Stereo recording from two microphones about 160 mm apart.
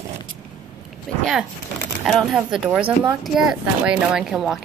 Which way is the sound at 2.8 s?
35° right (ahead or behind).